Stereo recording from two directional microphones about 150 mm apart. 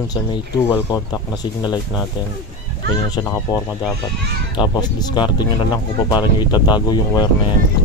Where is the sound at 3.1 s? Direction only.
25° left (ahead or behind).